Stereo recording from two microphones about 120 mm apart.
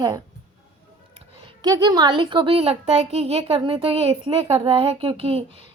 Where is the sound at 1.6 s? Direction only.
35° right (ahead or behind); by 3.6 s 55° right (ahead or behind).